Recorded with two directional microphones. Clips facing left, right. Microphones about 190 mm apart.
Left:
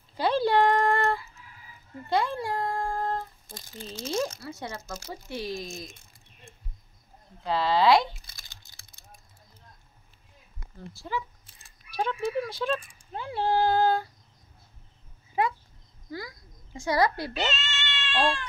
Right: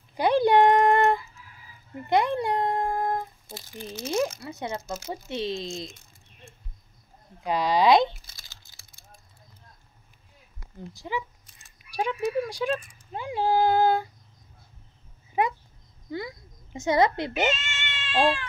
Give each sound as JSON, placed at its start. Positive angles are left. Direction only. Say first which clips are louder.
{"t": 0.1, "sound": "a sound", "louder": "right 4 dB", "side_deg": -15}
{"t": 4.0, "sound": "speech", "louder": "right 3 dB", "side_deg": -10}
{"t": 4.4, "sound": "speech", "louder": "right 4 dB", "side_deg": -20}
{"t": 7.4, "sound": "speech", "louder": "right 1 dB", "side_deg": -15}
{"t": 8.4, "sound": "typing", "louder": "even", "side_deg": 15}
{"t": 10.9, "sound": "speech", "louder": "right 1 dB", "side_deg": -15}
{"t": 11.4, "sound": "a sound", "louder": "even", "side_deg": 35}
{"t": 11.9, "sound": "speech", "louder": "right 2 dB", "side_deg": -10}
{"t": 15.4, "sound": "a child's voice", "louder": "right 1 dB", "side_deg": -20}
{"t": 17.5, "sound": "cat", "louder": "right 4 dB", "side_deg": -10}